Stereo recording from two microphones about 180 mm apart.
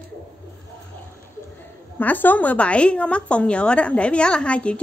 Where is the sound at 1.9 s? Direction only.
10° left (ahead or behind).